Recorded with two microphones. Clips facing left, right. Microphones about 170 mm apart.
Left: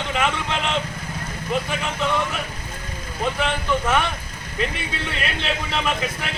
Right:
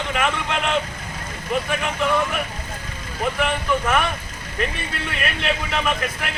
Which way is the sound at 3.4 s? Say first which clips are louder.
Right 2 dB; centre (ahead or behind).